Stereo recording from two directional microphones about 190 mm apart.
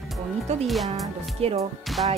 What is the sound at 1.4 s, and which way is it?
Speech, 30° right (ahead or behind).